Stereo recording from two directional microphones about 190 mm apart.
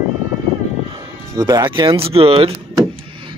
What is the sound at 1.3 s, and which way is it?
Speech, 20° right (ahead or behind).